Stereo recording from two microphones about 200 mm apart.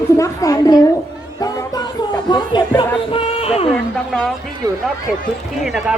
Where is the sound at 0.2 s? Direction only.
15° left (ahead or behind).